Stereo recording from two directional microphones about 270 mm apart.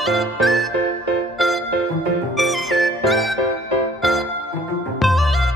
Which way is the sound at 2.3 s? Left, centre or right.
Centre.